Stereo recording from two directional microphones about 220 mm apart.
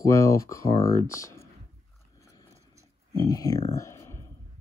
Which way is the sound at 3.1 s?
15° left (ahead or behind).